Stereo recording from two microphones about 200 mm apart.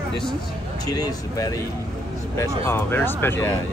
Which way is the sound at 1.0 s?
20° left (ahead or behind).